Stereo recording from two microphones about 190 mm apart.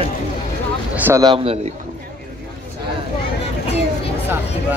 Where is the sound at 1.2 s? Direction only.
30° right (ahead or behind).